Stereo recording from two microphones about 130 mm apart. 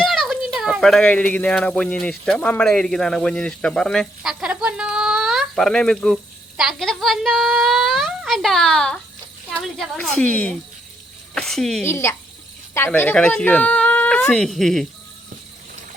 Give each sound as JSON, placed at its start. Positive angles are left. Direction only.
{"t": 0.0, "sound": "speech", "side_deg": 0}
{"t": 11.8, "sound": "speech", "side_deg": 20}